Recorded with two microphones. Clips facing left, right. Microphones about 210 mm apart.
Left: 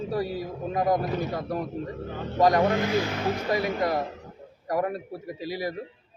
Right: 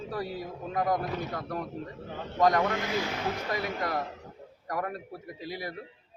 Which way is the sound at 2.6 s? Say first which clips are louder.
Left 6 dB; 35° left (ahead or behind).